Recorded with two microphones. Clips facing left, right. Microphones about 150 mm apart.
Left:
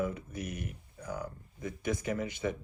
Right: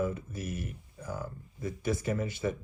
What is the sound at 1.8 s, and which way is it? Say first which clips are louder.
Speech: right 2 dB; 15° left (ahead or behind).